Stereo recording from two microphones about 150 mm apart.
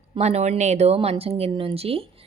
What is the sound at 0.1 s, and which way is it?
A woman's voice, 45° right (ahead or behind).